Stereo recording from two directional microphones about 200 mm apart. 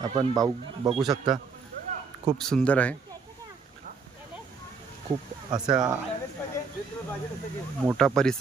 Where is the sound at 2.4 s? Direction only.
5° left (ahead or behind).